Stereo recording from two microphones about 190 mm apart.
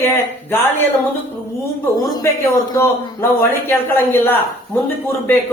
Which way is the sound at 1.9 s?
15° left (ahead or behind).